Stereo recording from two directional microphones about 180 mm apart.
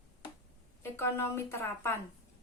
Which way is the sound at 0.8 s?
15° left (ahead or behind).